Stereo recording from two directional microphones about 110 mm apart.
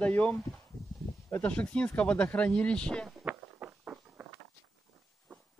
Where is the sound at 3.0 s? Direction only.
15° right (ahead or behind).